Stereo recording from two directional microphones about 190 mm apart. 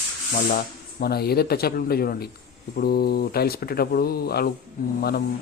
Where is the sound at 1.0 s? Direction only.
55° left (ahead or behind).